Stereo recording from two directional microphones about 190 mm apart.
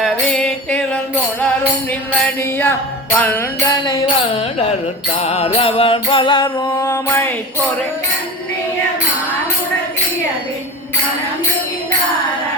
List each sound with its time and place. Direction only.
0.0 s music: 5° left (ahead or behind)
2.2 s music: 10° left (ahead or behind)
5.1 s music: 35° left (ahead or behind)
6.7 s music: 10° left (ahead or behind)